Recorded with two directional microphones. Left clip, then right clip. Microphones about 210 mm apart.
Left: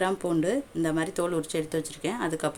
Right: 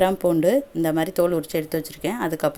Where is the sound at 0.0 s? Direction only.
20° right (ahead or behind).